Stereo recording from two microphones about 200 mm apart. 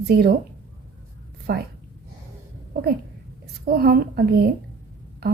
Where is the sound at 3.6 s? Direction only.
50° right (ahead or behind).